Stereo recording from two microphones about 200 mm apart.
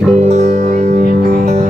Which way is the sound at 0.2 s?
35° right (ahead or behind).